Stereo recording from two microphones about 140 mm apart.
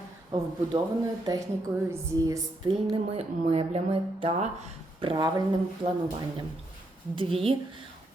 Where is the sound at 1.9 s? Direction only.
25° right (ahead or behind).